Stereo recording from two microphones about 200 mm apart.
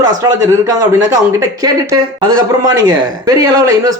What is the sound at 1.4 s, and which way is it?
A woman's voice, 15° right (ahead or behind).